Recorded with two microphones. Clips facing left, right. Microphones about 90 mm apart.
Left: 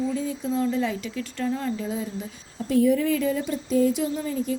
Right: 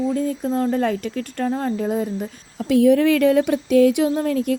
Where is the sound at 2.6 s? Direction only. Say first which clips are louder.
Right 6 dB; 70° right (ahead or behind).